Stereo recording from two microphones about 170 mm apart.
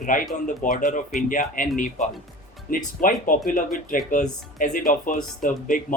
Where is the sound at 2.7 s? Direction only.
55° left (ahead or behind).